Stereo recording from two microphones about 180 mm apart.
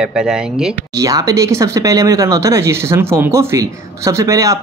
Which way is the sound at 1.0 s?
20° right (ahead or behind).